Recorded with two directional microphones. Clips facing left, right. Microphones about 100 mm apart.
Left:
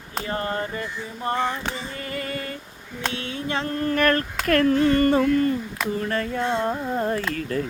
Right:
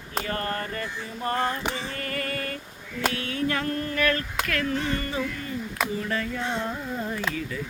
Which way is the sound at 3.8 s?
45° left (ahead or behind).